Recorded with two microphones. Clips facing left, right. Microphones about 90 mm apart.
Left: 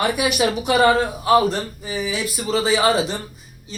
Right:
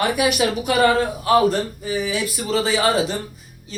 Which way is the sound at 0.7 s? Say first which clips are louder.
Left 1 dB; 20° left (ahead or behind).